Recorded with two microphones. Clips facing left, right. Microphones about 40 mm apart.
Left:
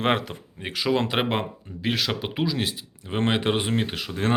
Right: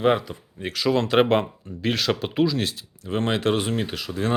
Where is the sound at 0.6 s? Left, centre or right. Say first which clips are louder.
Right 1 dB; centre.